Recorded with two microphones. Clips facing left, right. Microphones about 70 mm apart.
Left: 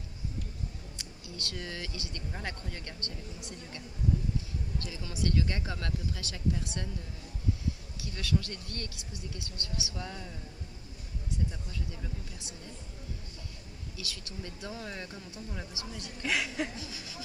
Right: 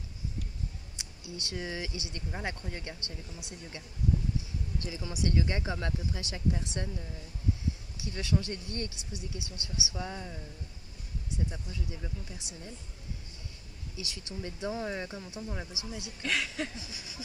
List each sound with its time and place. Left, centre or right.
0.9 s speech: right
8.0 s speech: right
13.9 s speech: right
16.2 s speech: centre
16.7 s speech: centre